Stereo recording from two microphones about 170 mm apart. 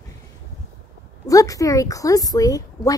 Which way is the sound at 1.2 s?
20° left (ahead or behind).